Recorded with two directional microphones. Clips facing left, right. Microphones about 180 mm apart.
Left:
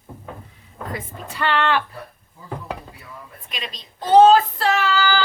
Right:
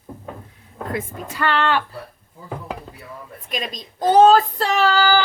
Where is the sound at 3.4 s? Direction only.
45° right (ahead or behind).